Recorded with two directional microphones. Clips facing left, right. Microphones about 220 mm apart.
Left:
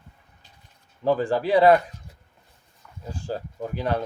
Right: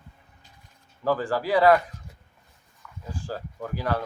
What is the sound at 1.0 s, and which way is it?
Speech, 25° left (ahead or behind).